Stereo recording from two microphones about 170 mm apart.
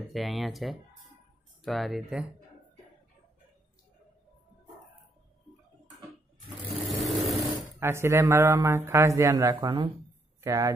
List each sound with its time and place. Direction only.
0.1 s speech: centre (ahead or behind)
6.9 s vehicle: centre (ahead or behind)
7.8 s a man's voice: 15° right (ahead or behind)